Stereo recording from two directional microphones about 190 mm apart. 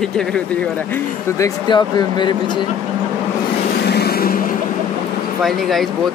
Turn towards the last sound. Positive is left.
turn(degrees=0)  # may be behind; listen again after turning